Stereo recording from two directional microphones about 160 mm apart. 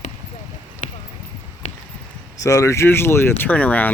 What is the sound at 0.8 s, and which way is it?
Clip-clop, 50° left (ahead or behind).